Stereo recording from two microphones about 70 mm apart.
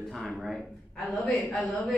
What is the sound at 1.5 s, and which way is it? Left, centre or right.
Speech, left.